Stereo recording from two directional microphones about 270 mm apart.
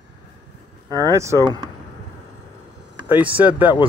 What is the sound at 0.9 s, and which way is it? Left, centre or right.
Speech, centre.